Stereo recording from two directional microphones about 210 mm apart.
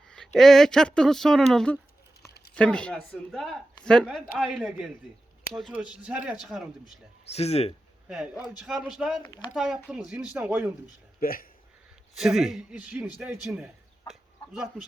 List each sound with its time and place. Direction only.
0.3 s speech: centre (ahead or behind)
6.8 s speech: 30° left (ahead or behind)
8.0 s speech: 5° right (ahead or behind)
11.2 s speech: 45° left (ahead or behind)
12.1 s speech: centre (ahead or behind)
14.1 s dog: 5° right (ahead or behind)